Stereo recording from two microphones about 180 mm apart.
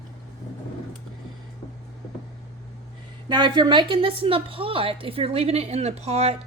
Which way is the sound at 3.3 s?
25° right (ahead or behind).